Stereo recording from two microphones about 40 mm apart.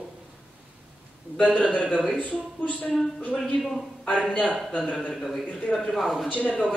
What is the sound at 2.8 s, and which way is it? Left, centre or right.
Speech, left.